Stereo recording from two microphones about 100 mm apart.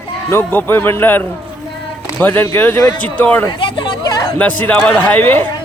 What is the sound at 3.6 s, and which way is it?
Chatter, 55° left (ahead or behind).